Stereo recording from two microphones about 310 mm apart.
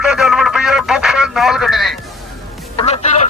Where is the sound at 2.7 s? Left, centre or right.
Centre.